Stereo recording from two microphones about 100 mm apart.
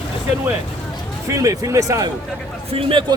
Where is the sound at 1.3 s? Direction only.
35° right (ahead or behind).